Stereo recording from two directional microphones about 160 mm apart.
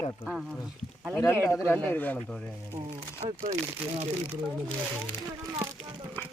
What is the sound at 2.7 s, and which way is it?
Speech, 35° right (ahead or behind).